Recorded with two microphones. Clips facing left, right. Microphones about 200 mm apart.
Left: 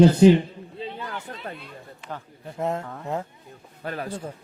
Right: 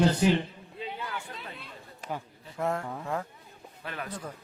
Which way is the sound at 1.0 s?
45° left (ahead or behind).